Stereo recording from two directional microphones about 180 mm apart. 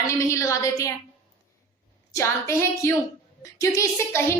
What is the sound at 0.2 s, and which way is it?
Speech, 15° left (ahead or behind).